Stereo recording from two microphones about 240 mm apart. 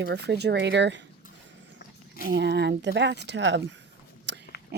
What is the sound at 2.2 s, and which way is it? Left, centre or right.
Speech, right.